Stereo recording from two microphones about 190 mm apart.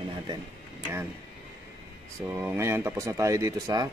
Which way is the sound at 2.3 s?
15° right (ahead or behind).